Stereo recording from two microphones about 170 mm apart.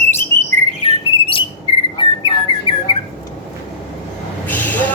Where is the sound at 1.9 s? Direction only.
30° left (ahead or behind).